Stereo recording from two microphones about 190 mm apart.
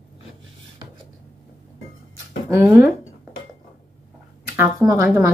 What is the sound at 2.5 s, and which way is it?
Speech, 10° right (ahead or behind).